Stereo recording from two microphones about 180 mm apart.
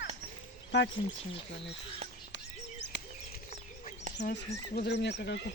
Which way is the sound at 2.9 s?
80° left.